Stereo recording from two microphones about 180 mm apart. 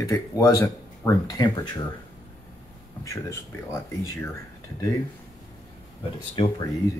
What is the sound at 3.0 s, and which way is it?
Speech, 15° left (ahead or behind).